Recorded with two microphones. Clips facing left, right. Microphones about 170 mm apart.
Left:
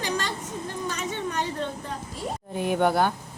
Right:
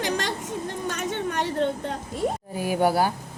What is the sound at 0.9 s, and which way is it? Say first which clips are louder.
A woman's voice: right 3 dB; 50° right (ahead or behind).